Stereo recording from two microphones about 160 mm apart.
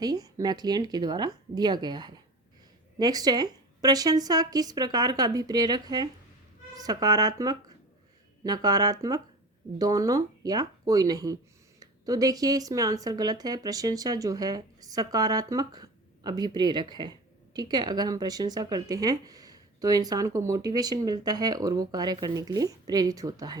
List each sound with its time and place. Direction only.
0.0 s speech: 25° right (ahead or behind)